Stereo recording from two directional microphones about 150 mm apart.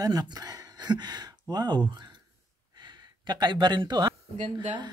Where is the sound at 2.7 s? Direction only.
30° right (ahead or behind).